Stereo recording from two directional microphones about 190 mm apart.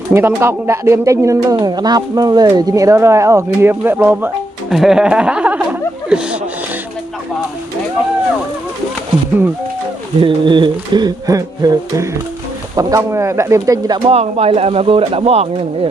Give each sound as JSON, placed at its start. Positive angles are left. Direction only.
{"t": 0.1, "sound": "speech", "side_deg": -10}
{"t": 10.2, "sound": "music", "side_deg": -25}
{"t": 12.7, "sound": "speech", "side_deg": -15}
{"t": 14.1, "sound": "speech", "side_deg": -35}